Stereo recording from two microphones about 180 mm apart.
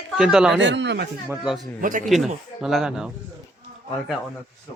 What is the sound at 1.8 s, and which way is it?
Speech, 45° right (ahead or behind).